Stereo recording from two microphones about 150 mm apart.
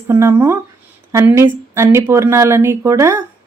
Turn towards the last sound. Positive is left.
turn(degrees=-20)  # may be behind; listen again after turning